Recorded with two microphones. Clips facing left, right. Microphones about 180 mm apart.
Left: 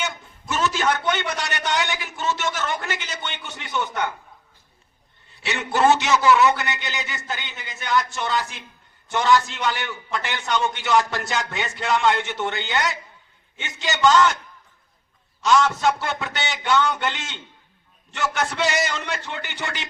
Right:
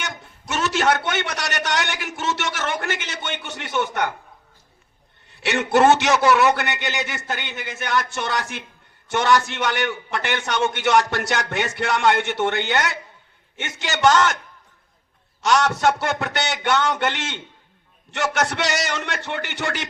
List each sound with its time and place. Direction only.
0.0 s a man's voice: 70° right (ahead or behind)
5.4 s a man's voice: 70° right (ahead or behind)
15.4 s a man's voice: 70° right (ahead or behind)